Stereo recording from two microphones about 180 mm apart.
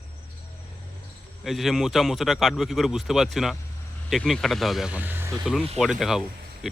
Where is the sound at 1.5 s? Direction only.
Centre (ahead or behind).